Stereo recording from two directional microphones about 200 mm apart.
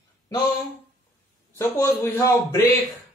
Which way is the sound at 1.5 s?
10° left (ahead or behind).